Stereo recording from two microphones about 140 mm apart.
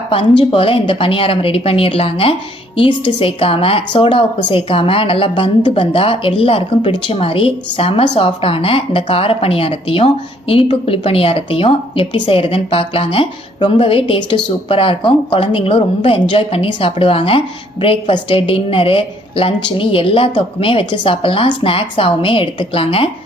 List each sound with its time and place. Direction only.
0.1 s a woman's voice: 40° left (ahead or behind)